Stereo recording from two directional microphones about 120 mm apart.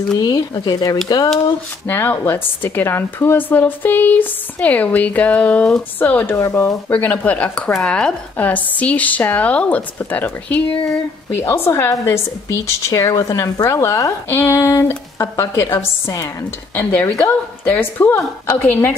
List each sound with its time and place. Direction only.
0.1 s speech: 35° left (ahead or behind)
1.9 s a woman's voice: 15° left (ahead or behind)
6.9 s a woman's voice: 10° left (ahead or behind)